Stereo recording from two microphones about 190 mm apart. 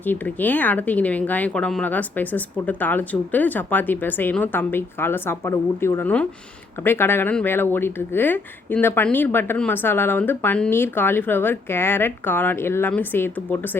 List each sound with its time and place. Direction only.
0.0 s speech: 10° left (ahead or behind)